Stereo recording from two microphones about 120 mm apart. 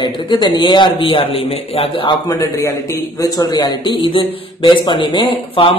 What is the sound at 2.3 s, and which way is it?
A man's voice, 30° left (ahead or behind).